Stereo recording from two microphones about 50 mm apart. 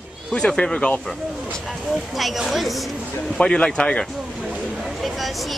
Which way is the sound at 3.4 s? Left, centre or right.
Centre.